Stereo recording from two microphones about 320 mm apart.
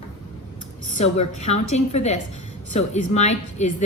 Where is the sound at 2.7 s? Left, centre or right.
Left.